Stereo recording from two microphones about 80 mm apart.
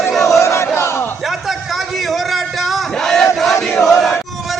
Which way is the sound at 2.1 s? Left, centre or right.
Centre.